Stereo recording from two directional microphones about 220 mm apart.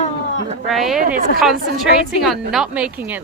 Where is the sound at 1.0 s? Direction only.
40° right (ahead or behind).